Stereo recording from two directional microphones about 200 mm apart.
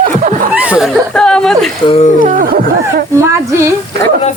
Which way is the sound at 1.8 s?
30° left (ahead or behind).